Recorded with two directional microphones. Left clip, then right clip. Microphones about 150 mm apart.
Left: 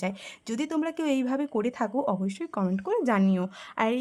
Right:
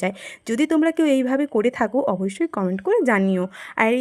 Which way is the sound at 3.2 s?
15° right (ahead or behind).